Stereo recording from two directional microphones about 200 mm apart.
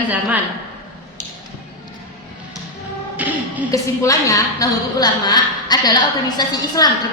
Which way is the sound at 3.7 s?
15° left (ahead or behind).